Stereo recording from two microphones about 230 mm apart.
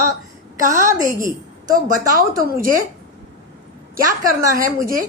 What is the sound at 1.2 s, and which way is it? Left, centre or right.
A woman's voice, right.